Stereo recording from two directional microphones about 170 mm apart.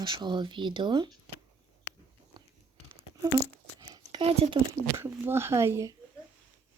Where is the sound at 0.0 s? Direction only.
25° right (ahead or behind).